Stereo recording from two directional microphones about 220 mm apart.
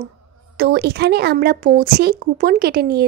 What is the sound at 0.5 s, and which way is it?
Speech, 45° right (ahead or behind).